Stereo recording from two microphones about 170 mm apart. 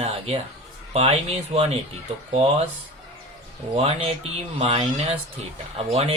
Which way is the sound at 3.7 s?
35° right (ahead or behind).